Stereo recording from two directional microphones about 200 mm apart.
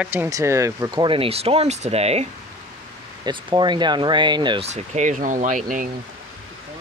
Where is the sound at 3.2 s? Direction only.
20° right (ahead or behind).